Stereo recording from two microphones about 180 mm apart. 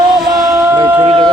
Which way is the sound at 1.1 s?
30° right (ahead or behind).